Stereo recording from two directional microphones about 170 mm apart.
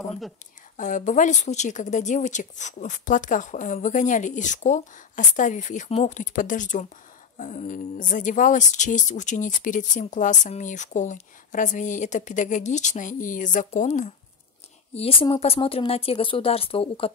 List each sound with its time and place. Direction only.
0.7 s speech: 45° left (ahead or behind)
15.0 s a woman's voice: 35° left (ahead or behind)